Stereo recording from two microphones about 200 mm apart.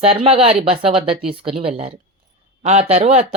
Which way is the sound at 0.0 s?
30° right (ahead or behind).